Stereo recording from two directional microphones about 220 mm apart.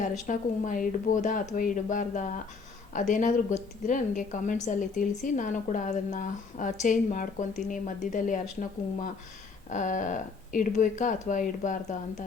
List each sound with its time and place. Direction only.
0.3 s speech: 35° left (ahead or behind)
9.6 s speech: 35° left (ahead or behind)